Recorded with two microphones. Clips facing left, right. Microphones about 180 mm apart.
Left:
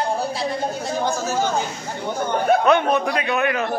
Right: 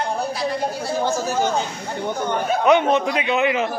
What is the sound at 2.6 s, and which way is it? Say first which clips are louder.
A man's voice: right 1 dB; 15° right (ahead or behind).